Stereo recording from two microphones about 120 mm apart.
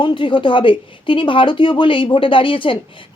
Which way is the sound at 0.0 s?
45° left (ahead or behind).